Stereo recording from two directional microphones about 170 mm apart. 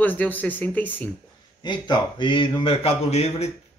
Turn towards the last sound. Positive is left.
turn(degrees=40)  # may be behind; listen again after turning